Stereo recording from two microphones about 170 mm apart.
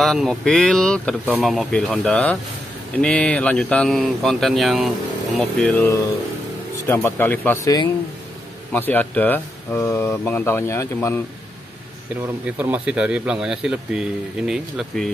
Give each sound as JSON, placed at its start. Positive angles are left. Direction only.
{"t": 0.0, "sound": "speech", "side_deg": 0}
{"t": 8.7, "sound": "speech", "side_deg": 10}
{"t": 12.5, "sound": "speech", "side_deg": -10}